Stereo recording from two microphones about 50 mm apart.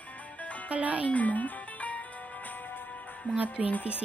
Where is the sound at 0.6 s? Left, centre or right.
Right.